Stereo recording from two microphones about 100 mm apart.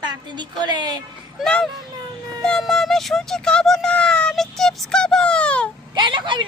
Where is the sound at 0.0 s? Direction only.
45° right (ahead or behind).